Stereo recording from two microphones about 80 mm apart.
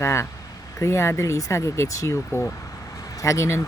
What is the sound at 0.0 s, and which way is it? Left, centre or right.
Speech, left.